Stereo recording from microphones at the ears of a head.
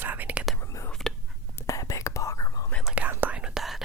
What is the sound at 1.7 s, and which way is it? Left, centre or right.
Whispering, left.